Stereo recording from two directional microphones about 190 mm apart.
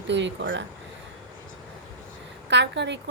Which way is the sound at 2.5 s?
65° right (ahead or behind).